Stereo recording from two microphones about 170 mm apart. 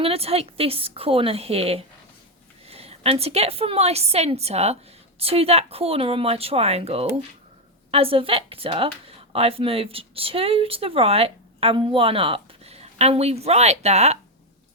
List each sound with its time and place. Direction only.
0.0 s speech: 35° right (ahead or behind)